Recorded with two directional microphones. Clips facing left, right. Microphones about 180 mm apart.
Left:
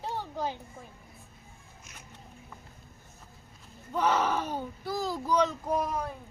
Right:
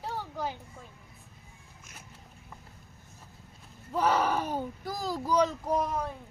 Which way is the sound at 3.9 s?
10° right (ahead or behind).